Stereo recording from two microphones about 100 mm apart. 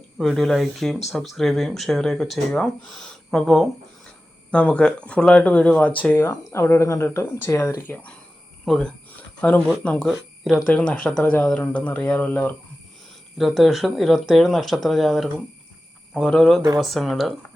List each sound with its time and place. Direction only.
0.2 s speech: centre (ahead or behind)
4.5 s speech: 10° left (ahead or behind)
6.1 s speech: 25° left (ahead or behind)
7.9 s speech: 15° left (ahead or behind)
8.6 s speech: centre (ahead or behind)
9.0 s speech: 15° left (ahead or behind)
10.1 s speech: centre (ahead or behind)
10.7 s speech: 10° left (ahead or behind)
13.4 s speech: centre (ahead or behind)